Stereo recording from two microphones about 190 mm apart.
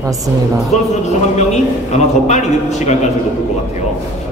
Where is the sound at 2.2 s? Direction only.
35° left (ahead or behind).